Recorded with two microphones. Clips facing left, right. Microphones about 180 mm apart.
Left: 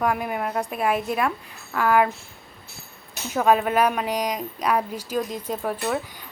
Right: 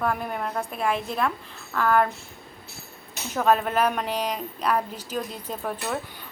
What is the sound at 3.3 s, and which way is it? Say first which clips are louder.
Speech: left 2 dB; 10° left (ahead or behind).